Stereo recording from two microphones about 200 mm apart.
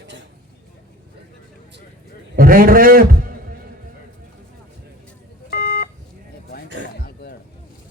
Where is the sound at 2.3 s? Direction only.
45° right (ahead or behind).